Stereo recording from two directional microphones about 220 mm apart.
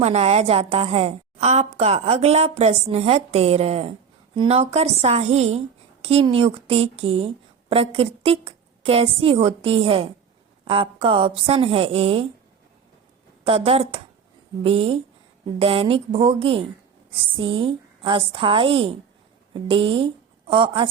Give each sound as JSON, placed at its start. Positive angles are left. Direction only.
{"t": 0.0, "sound": "speech", "side_deg": -30}
{"t": 13.4, "sound": "speech", "side_deg": -25}